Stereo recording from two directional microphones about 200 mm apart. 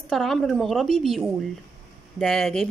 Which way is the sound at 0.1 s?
Centre (ahead or behind).